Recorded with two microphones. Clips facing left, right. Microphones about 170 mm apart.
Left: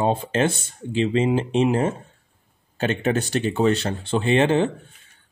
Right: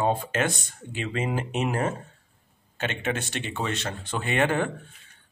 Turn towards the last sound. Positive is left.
turn(degrees=25)  # may be behind; listen again after turning